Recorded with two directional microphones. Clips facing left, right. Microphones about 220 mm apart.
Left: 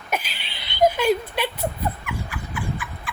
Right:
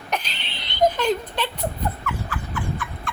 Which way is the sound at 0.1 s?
5° left (ahead or behind).